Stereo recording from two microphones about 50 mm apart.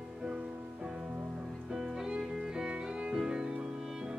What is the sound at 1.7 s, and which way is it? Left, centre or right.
Music, centre.